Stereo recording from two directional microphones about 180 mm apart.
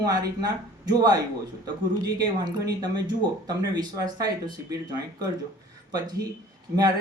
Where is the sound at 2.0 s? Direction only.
20° right (ahead or behind).